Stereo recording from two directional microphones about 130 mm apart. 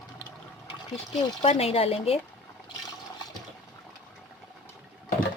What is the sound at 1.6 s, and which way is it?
Speech, 50° left (ahead or behind).